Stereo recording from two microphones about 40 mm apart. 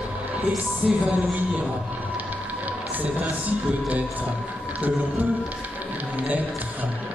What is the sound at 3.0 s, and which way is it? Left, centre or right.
A man's voice, right.